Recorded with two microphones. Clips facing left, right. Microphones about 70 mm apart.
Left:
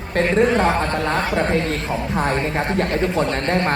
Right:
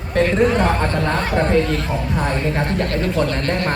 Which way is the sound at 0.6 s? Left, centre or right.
Left.